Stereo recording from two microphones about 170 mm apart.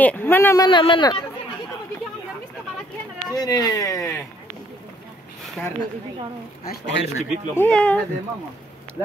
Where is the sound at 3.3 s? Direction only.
20° left (ahead or behind).